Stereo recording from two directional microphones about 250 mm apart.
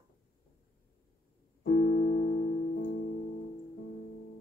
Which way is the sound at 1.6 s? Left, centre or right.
Left.